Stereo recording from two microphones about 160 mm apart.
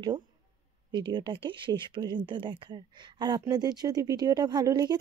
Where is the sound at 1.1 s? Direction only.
30° right (ahead or behind).